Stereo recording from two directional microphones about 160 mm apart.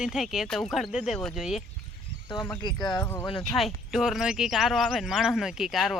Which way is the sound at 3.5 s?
Centre (ahead or behind).